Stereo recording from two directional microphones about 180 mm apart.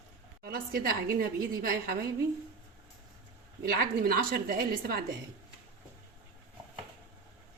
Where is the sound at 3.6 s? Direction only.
55° right (ahead or behind).